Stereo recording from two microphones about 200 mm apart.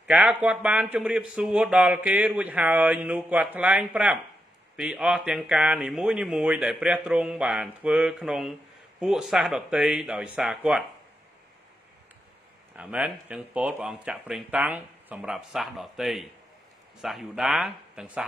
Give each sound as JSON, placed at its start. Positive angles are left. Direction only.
{"t": 0.0, "sound": "a man's voice", "side_deg": -5}
{"t": 12.7, "sound": "a man's voice", "side_deg": -5}